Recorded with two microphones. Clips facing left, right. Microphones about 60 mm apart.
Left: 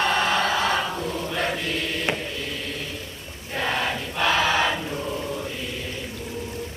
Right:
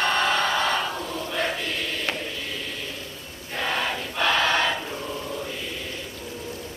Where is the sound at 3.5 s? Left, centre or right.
Centre.